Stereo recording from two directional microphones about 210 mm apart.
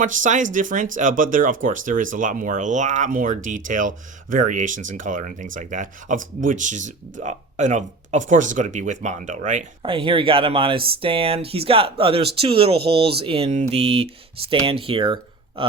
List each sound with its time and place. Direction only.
0.0 s speech: 40° right (ahead or behind)